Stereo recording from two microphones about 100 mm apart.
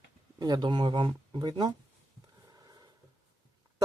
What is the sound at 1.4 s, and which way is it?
Speech, 45° right (ahead or behind).